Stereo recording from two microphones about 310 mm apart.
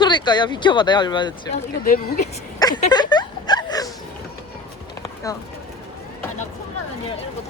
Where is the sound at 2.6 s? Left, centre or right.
Centre.